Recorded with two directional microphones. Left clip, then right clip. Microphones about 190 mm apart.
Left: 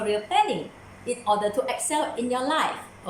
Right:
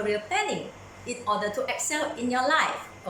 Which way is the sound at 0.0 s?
15° left (ahead or behind).